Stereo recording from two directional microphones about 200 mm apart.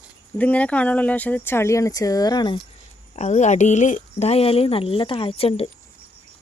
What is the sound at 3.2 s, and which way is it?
Speech, 35° left (ahead or behind).